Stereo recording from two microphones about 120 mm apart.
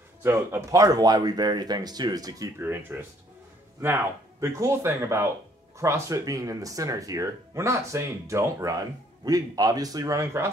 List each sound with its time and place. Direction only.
0.2 s speech: 20° right (ahead or behind)
2.6 s speech: 15° right (ahead or behind)